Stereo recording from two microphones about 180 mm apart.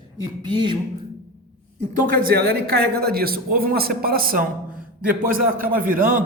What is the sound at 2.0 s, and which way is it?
A man's voice, 50° right (ahead or behind).